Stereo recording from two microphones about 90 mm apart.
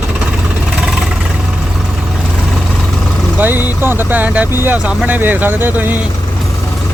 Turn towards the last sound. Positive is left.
turn(degrees=-20)  # may be behind; listen again after turning